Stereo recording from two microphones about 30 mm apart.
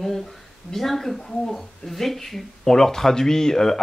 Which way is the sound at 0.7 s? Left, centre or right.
Centre.